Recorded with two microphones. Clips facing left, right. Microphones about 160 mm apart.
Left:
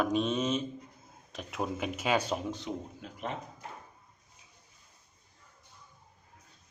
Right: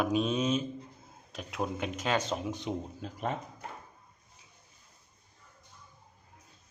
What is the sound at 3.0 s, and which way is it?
Speech, 40° right (ahead or behind).